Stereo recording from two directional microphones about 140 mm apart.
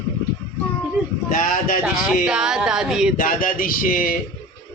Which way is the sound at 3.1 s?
80° left.